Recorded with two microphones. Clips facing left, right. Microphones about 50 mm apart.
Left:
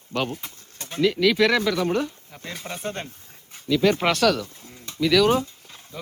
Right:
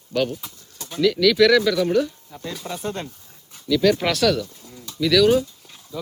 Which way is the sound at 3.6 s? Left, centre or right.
Left.